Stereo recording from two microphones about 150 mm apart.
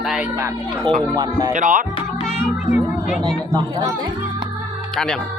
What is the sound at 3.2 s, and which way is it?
Speech, 25° right (ahead or behind).